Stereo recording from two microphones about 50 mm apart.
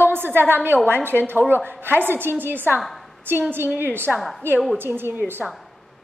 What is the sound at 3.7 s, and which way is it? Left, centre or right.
A woman's voice, right.